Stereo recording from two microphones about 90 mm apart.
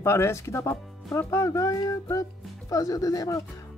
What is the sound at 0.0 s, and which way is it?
Speech, 30° left (ahead or behind).